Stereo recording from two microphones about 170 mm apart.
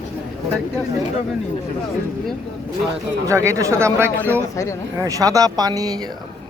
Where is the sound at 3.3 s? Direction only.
15° right (ahead or behind).